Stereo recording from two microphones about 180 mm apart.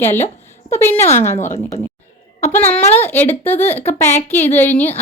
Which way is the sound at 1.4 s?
40° left (ahead or behind).